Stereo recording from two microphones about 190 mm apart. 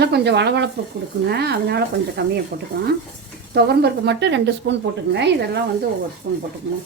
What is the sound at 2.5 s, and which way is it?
Speech, 45° right (ahead or behind).